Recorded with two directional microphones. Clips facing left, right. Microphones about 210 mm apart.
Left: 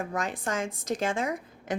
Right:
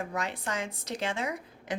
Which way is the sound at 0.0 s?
50° left (ahead or behind).